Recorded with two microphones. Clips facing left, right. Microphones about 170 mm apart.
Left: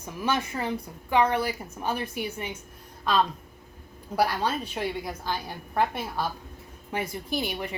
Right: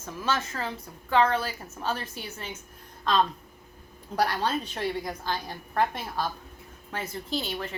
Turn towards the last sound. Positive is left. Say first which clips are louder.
# left 2 dB
turn(degrees=15)  # may be behind; listen again after turning